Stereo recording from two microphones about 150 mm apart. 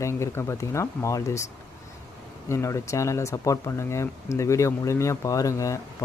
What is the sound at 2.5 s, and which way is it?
Speech, 20° left (ahead or behind).